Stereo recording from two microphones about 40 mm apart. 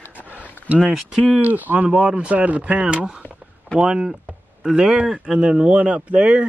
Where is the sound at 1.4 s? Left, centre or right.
Right.